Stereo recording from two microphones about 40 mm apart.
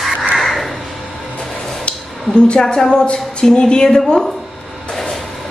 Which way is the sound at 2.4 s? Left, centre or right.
Left.